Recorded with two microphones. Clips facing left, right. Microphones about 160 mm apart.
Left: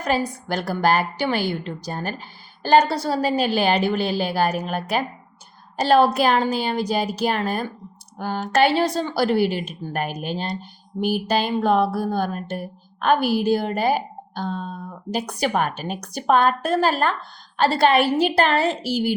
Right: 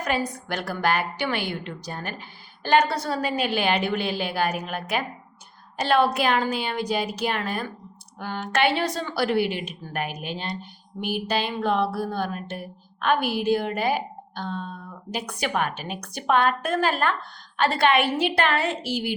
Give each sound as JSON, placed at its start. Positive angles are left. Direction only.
{"t": 0.0, "sound": "speech", "side_deg": 35}